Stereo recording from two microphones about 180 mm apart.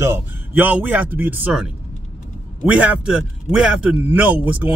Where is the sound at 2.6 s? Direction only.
5° right (ahead or behind).